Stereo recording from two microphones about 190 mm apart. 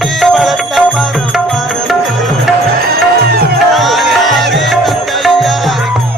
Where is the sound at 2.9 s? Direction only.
55° right (ahead or behind).